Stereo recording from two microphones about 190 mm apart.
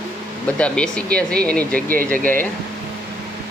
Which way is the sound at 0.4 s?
5° left (ahead or behind).